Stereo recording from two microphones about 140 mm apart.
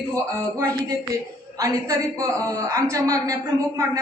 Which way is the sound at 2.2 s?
25° right (ahead or behind).